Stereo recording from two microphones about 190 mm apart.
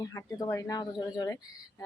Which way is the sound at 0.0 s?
15° left (ahead or behind).